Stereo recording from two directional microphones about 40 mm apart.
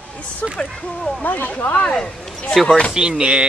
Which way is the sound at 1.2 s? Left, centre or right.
Left.